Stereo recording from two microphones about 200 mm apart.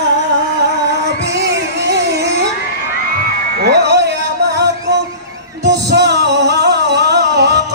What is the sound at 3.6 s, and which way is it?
Music, 55° right (ahead or behind).